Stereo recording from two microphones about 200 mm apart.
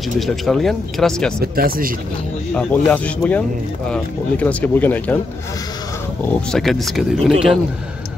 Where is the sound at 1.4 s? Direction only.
50° right (ahead or behind).